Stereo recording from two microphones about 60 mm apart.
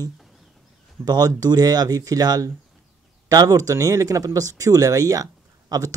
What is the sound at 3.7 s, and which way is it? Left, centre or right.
Speech, right.